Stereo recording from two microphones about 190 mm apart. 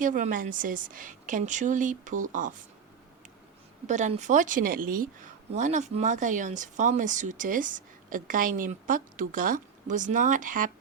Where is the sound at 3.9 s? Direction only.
40° right (ahead or behind).